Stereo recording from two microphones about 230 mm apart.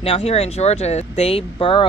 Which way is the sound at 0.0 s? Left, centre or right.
Left.